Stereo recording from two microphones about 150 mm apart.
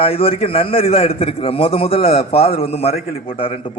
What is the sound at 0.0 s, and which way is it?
A man's voice, 40° left (ahead or behind).